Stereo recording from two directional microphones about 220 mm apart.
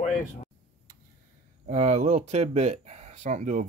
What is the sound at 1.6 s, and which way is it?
Speech, 30° right (ahead or behind).